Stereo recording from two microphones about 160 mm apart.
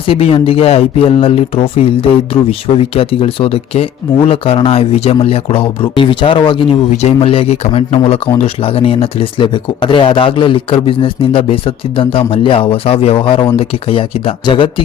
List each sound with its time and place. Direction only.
0.1 s speech: 35° left (ahead or behind)